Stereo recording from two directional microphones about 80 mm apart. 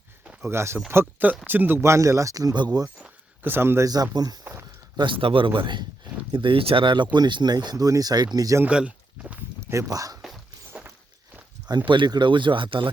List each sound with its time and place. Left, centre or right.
0.4 s speech: right
1.8 s speech: right
3.4 s speech: right
3.8 s speech: right
4.9 s speech: right
8.6 s a sound: centre
9.6 s speech: right
10.2 s a sound: centre
11.9 s speech: right